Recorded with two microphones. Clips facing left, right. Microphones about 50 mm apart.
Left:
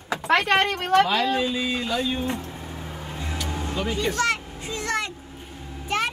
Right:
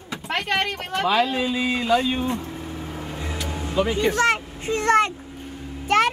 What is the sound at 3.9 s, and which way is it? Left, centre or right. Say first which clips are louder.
Vehicle: right 3 dB; right.